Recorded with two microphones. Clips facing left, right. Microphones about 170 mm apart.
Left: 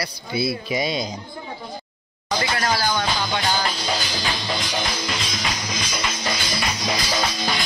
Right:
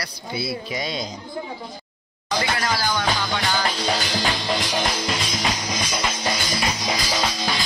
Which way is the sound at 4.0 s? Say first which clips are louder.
Right 3 dB; 45° right (ahead or behind).